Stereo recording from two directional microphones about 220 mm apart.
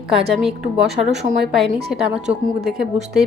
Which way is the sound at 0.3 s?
Centre (ahead or behind).